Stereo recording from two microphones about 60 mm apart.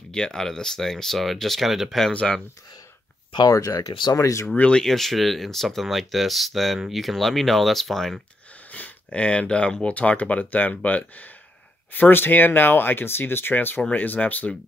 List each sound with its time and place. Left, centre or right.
0.1 s speech: centre
3.4 s speech: left
4.6 s speech: centre
4.8 s speech: centre
8.7 s speech: left